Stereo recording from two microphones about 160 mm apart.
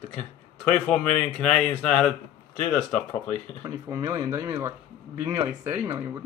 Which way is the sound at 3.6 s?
20° right (ahead or behind).